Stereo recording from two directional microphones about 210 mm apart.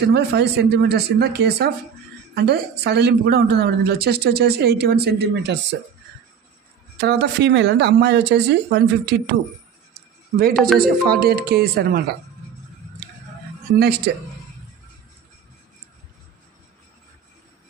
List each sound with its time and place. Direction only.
0.1 s a woman's voice: 50° right (ahead or behind)
7.0 s speech: 50° right (ahead or behind)
10.3 s a man's voice: 40° right (ahead or behind)
13.7 s speech: 50° right (ahead or behind)